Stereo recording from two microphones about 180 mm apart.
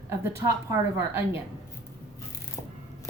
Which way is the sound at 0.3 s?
15° right (ahead or behind).